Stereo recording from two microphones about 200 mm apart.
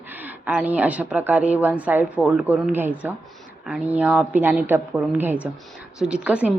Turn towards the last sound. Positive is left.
turn(degrees=-5)  # may be behind; listen again after turning